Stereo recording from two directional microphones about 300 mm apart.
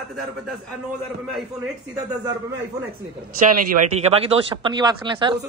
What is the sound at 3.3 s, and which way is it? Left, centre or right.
Speech, right.